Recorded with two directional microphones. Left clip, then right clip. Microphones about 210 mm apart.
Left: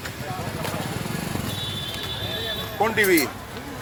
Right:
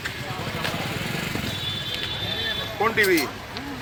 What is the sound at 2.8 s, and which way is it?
Speech, 45° left (ahead or behind).